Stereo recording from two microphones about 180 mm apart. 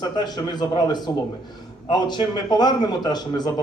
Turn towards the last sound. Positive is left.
turn(degrees=25)  # may be behind; listen again after turning